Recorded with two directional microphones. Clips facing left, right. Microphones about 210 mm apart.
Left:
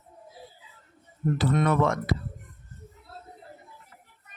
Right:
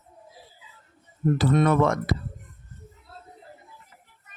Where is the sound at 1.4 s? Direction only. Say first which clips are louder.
Right 3 dB; 40° right (ahead or behind).